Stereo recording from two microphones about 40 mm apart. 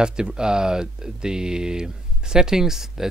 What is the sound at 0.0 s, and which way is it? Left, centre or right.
Speech, centre.